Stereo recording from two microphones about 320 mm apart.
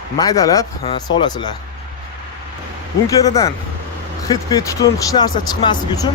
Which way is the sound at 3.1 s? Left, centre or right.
Centre.